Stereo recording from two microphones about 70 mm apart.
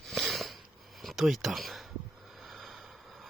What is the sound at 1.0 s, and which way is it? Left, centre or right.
Speech, centre.